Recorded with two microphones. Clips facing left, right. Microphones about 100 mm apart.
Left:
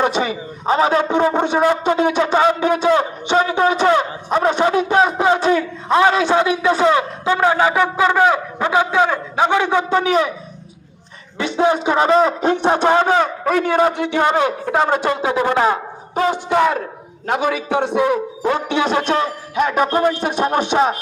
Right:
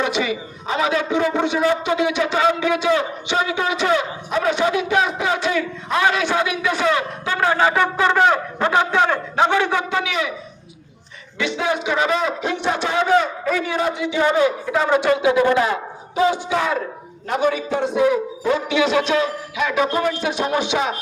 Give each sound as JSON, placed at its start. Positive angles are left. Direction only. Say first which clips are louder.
{"t": 0.0, "sound": "a man's voice", "louder": "left 3 dB", "side_deg": 40}
{"t": 10.0, "sound": "a man's voice", "louder": "left 7 dB", "side_deg": 40}
{"t": 11.3, "sound": "a man's voice", "louder": "left 5 dB", "side_deg": 40}
{"t": 16.1, "sound": "a sound", "louder": "left 2 dB", "side_deg": 55}
{"t": 17.2, "sound": "a man's voice", "louder": "left 1 dB", "side_deg": 70}